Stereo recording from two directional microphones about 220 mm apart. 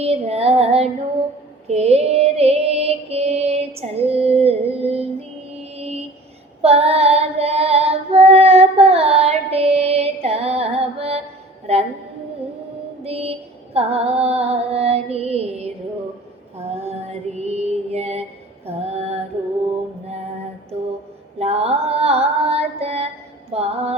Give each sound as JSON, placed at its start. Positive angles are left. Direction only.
{"t": 0.0, "sound": "mantra", "side_deg": -30}
{"t": 3.8, "sound": "female singing", "side_deg": -25}
{"t": 5.7, "sound": "mantra", "side_deg": -25}
{"t": 6.6, "sound": "female singing", "side_deg": -30}
{"t": 11.6, "sound": "music", "side_deg": -30}
{"t": 13.1, "sound": "child singing", "side_deg": -25}
{"t": 13.7, "sound": "female singing", "side_deg": -25}
{"t": 21.3, "sound": "female singing", "side_deg": -30}
{"t": 23.5, "sound": "music", "side_deg": -30}